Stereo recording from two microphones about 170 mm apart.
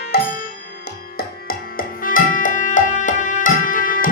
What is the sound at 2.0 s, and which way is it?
Music, 50° left (ahead or behind).